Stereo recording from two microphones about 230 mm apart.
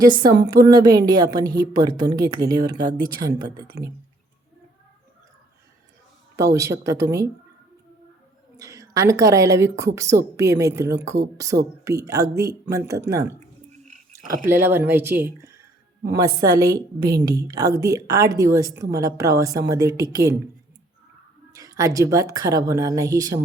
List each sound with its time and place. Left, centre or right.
0.0 s a woman's voice: centre
6.3 s a woman's voice: centre
8.5 s a woman's voice: centre
14.4 s a woman's voice: centre
21.5 s a woman's voice: centre